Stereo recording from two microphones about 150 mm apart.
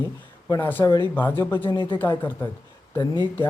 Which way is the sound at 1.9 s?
15° left (ahead or behind).